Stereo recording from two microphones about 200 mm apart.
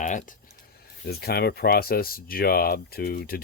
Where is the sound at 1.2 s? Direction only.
50° left (ahead or behind).